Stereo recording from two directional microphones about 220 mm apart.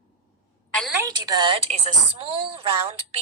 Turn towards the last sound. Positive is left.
turn(degrees=-25)  # may be behind; listen again after turning